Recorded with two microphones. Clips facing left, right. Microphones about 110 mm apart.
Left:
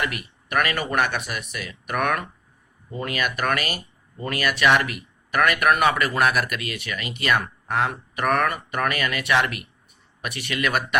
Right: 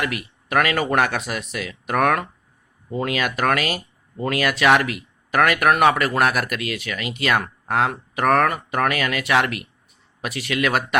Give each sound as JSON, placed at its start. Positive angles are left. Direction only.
{"t": 0.0, "sound": "speech", "side_deg": -90}